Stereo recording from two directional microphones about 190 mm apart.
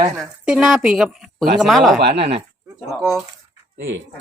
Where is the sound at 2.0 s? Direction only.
60° right (ahead or behind).